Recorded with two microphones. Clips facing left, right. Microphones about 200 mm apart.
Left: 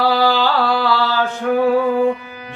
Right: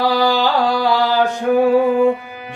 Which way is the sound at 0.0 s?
15° right (ahead or behind).